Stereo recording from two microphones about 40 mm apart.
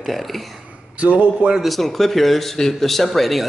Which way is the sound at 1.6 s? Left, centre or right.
Centre.